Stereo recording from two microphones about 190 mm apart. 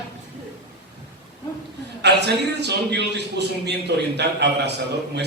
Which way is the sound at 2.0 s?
60° right (ahead or behind).